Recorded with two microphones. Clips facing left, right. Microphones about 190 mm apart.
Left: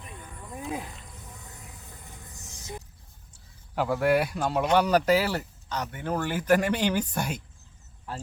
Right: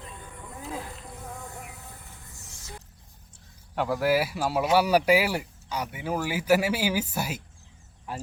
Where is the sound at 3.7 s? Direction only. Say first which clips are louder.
Left 1 dB; centre (ahead or behind).